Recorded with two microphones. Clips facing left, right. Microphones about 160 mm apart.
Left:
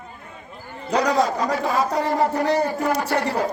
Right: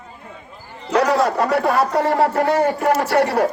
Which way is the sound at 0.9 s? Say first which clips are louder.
Right 3 dB; 65° right (ahead or behind).